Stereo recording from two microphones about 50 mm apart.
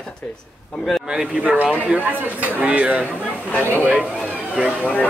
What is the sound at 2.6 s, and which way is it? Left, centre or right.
Speech, right.